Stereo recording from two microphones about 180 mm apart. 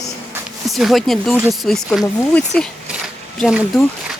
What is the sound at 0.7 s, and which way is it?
Speech, centre (ahead or behind).